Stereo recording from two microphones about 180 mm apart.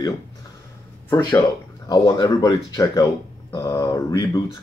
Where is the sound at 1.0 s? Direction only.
10° left (ahead or behind).